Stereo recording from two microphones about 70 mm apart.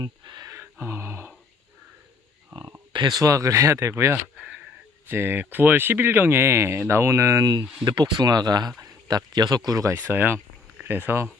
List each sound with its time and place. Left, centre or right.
0.0 s a sound: right
0.8 s speech: right
2.5 s speech: right
7.9 s speech: right
9.9 s speech: right